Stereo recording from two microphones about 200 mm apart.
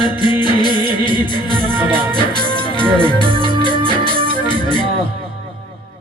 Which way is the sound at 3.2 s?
25° right (ahead or behind).